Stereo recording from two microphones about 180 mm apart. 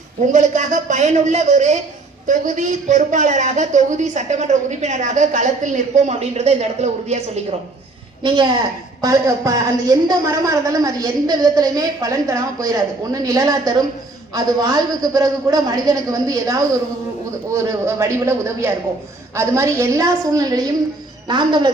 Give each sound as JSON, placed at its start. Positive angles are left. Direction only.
{"t": 0.3, "sound": "a woman's voice", "side_deg": -45}
{"t": 8.2, "sound": "a woman's voice", "side_deg": -25}